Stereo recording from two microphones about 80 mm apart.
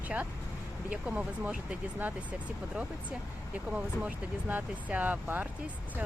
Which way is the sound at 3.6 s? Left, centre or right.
Centre.